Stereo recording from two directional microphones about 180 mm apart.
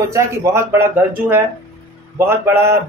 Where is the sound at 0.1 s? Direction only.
15° right (ahead or behind).